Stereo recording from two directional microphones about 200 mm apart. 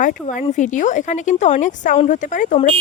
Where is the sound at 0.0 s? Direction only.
40° left (ahead or behind).